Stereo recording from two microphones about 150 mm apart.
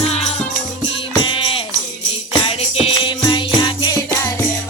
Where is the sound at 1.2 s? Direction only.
35° left (ahead or behind).